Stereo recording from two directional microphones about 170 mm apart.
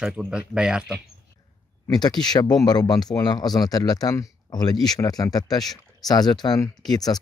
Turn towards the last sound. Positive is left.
turn(degrees=25)  # may be behind; listen again after turning